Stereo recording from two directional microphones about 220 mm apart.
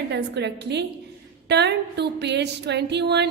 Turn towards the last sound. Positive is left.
turn(degrees=-50)  # may be behind; listen again after turning